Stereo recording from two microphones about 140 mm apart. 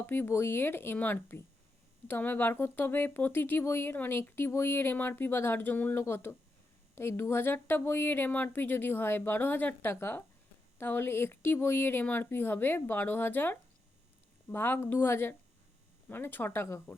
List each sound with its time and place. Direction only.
0.0 s speech: 15° left (ahead or behind)